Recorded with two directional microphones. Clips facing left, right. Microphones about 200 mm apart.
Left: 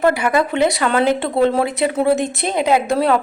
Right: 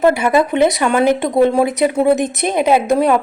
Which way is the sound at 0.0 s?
20° right (ahead or behind).